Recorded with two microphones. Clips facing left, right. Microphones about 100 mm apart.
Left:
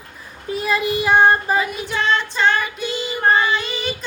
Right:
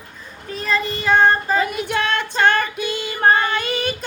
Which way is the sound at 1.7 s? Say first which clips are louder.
Left 1 dB; 55° right (ahead or behind).